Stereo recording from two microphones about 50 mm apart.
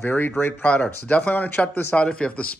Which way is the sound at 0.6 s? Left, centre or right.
Left.